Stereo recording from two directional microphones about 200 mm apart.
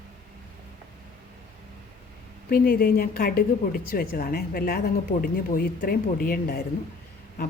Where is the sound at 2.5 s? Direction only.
45° left (ahead or behind).